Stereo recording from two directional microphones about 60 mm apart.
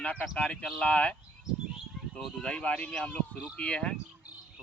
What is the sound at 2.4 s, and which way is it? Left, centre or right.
Speech, centre.